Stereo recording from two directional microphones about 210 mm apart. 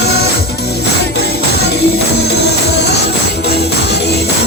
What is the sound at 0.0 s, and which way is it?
Music, 50° left (ahead or behind).